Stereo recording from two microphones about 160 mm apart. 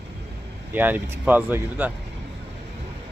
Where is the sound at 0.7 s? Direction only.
10° right (ahead or behind).